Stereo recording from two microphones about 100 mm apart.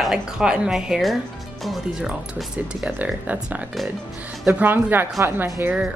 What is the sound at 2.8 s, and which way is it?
A woman's voice, 15° right (ahead or behind).